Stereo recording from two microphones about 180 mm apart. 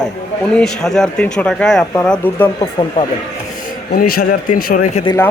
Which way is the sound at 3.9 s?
55° left (ahead or behind).